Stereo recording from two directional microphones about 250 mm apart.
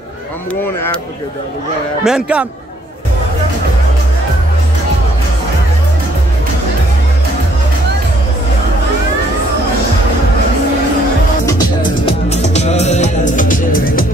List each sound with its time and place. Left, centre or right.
2.0 s a man's voice: centre
12.1 s music: left